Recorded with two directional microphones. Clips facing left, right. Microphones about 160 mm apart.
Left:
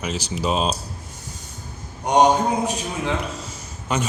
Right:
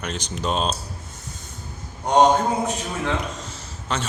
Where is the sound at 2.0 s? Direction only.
15° left (ahead or behind).